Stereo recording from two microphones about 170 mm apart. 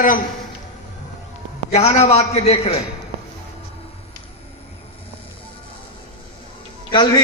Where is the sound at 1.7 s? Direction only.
40° left (ahead or behind).